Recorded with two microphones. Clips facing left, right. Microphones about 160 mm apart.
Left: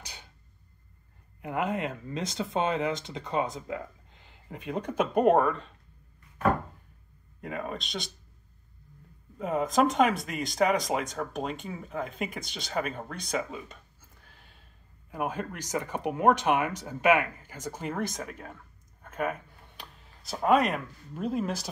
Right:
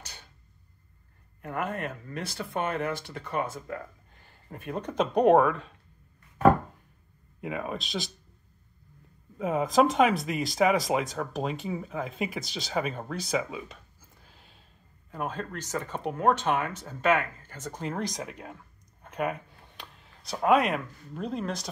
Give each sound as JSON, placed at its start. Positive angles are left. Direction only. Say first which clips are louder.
{"t": 0.0, "sound": "a sound", "louder": "left 1 dB", "side_deg": 15}
{"t": 1.4, "sound": "speech", "louder": "left 2 dB", "side_deg": 15}
{"t": 7.4, "sound": "speech", "louder": "right 2 dB", "side_deg": -5}
{"t": 9.4, "sound": "speech", "louder": "right 2 dB", "side_deg": 0}
{"t": 15.0, "sound": "speech", "louder": "left 2 dB", "side_deg": 10}
{"t": 18.2, "sound": "speech", "louder": "right 1 dB", "side_deg": -5}
{"t": 19.0, "sound": "a sound", "louder": "right 1 dB", "side_deg": 0}
{"t": 19.8, "sound": "speech", "louder": "right 1 dB", "side_deg": 0}